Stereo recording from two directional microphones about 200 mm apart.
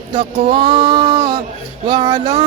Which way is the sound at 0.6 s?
25° right (ahead or behind).